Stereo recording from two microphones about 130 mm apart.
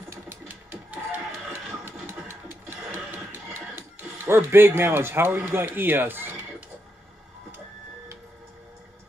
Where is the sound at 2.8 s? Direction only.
15° right (ahead or behind).